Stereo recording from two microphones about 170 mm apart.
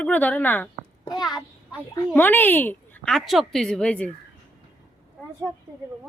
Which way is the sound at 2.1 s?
10° left (ahead or behind).